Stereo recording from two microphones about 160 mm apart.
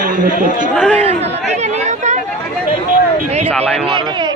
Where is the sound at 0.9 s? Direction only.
40° right (ahead or behind).